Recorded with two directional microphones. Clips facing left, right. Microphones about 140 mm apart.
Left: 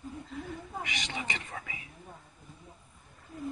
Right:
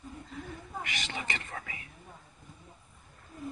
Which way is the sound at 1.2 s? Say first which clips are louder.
Even; 5° left (ahead or behind).